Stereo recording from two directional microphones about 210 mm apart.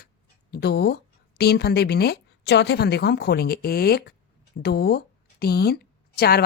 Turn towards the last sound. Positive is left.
turn(degrees=50)  # may be behind; listen again after turning